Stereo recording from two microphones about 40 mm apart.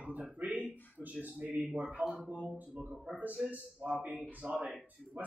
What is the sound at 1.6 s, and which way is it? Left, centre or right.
Speech, centre.